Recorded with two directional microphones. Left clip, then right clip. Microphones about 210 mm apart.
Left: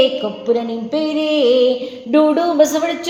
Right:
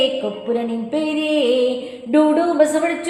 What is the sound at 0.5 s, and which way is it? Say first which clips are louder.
Music: left 1 dB; 30° left (ahead or behind).